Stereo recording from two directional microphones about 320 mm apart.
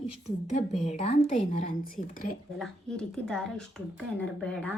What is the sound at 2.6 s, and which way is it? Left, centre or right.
Speech, centre.